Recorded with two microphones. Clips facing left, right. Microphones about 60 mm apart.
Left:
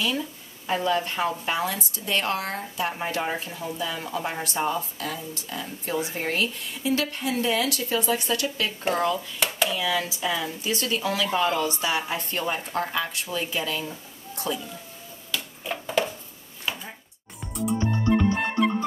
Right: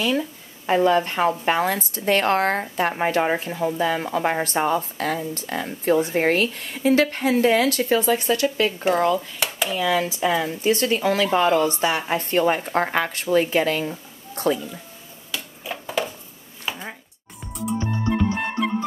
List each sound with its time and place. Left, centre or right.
0.7 s speech: right
9.7 s speech: right
15.3 s a sound: centre
17.6 s music: centre